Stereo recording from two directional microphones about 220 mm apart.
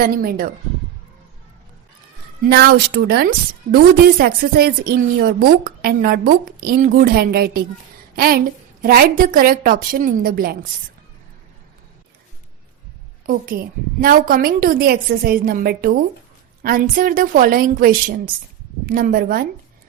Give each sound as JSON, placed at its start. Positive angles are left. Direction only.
{"t": 0.0, "sound": "a woman's voice", "side_deg": -40}
{"t": 2.4, "sound": "a woman's voice", "side_deg": -45}
{"t": 13.2, "sound": "a woman's voice", "side_deg": -40}